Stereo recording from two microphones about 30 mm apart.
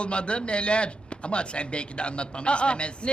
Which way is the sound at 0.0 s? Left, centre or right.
Left.